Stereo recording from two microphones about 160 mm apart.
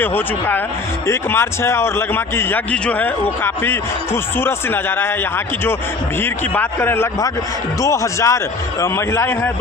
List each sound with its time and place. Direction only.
0.0 s a man's voice: 10° left (ahead or behind)
6.2 s a man's voice: 10° left (ahead or behind)